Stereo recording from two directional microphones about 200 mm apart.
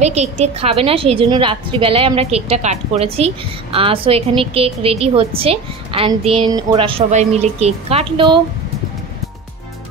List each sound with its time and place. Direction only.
0.0 s a woman's voice: 35° right (ahead or behind)